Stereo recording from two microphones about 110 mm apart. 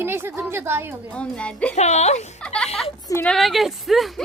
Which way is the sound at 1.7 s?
90° left.